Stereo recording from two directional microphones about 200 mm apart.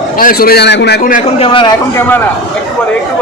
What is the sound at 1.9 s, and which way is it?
Speech, 10° left (ahead or behind).